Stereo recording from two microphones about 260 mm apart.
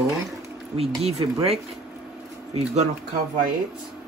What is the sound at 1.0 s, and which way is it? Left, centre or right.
Speech, right.